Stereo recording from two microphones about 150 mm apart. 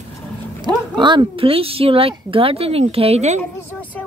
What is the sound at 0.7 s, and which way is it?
Speech, 30° right (ahead or behind).